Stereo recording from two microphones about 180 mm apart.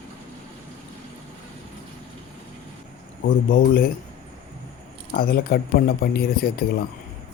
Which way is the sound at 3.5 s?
55° left (ahead or behind).